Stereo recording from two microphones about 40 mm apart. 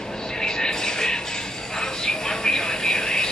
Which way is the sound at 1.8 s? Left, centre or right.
Centre.